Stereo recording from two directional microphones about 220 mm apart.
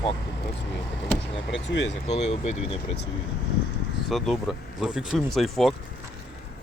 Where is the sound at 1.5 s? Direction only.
55° left (ahead or behind).